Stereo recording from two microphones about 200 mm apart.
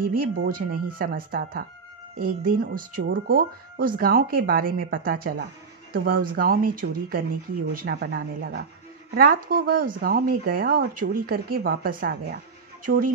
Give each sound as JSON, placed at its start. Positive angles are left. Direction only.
{"t": 0.0, "sound": "speech", "side_deg": -45}